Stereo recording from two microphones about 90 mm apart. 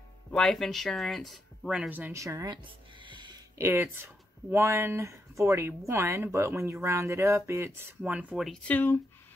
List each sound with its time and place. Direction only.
0.3 s speech: 5° left (ahead or behind)
1.7 s speech: 15° right (ahead or behind)
2.1 s speech: 35° right (ahead or behind)
2.5 s music: 60° right (ahead or behind)
3.5 s speech: 30° right (ahead or behind)
8.0 s speech: 15° right (ahead or behind)
8.6 s speech: 20° left (ahead or behind)